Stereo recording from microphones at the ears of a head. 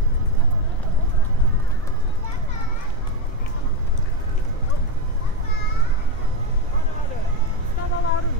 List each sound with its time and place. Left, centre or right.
7.8 s vehicle: left